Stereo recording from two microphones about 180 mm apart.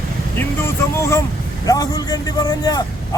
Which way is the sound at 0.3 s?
15° left (ahead or behind).